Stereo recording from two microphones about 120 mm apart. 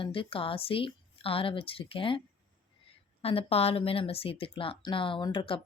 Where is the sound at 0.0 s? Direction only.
45° left (ahead or behind).